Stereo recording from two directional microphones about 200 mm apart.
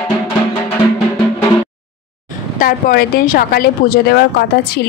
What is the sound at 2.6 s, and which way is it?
A woman's voice, 45° left (ahead or behind).